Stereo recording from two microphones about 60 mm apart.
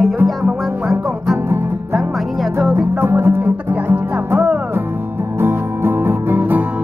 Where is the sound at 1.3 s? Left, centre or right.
Right.